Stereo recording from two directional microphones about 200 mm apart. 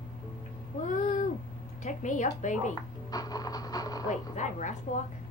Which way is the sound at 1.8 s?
40° left (ahead or behind).